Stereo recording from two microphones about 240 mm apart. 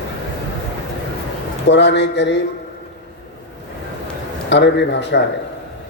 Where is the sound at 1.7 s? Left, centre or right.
Left.